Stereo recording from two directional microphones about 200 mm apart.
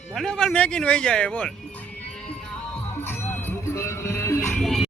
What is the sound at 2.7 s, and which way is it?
Music, 10° left (ahead or behind).